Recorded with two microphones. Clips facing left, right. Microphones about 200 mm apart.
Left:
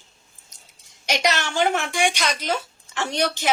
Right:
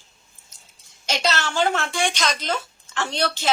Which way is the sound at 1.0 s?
15° left (ahead or behind).